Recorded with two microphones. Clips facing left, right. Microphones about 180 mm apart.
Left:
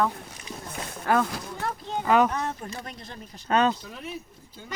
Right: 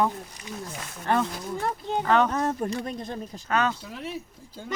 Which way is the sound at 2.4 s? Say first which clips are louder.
Right 6 dB; 45° right (ahead or behind).